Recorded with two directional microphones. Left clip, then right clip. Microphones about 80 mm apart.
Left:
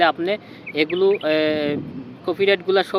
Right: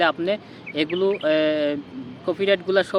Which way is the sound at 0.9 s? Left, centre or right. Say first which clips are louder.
Left 2 dB; centre.